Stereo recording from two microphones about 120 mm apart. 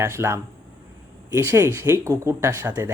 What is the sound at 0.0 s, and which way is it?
Speech, 25° right (ahead or behind).